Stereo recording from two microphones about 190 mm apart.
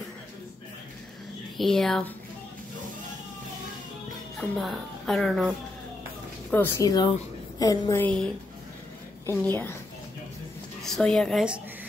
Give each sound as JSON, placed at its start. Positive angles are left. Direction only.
{"t": 1.6, "sound": "a woman's voice", "side_deg": 0}
{"t": 4.4, "sound": "a woman's voice", "side_deg": 0}
{"t": 6.5, "sound": "a woman's voice", "side_deg": 15}
{"t": 8.0, "sound": "a woman's voice", "side_deg": 5}
{"t": 10.8, "sound": "a woman's voice", "side_deg": 5}